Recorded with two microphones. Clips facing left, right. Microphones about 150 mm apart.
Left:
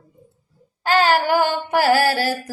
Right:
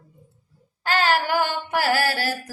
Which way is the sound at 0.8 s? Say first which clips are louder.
Left 5 dB; 40° left (ahead or behind).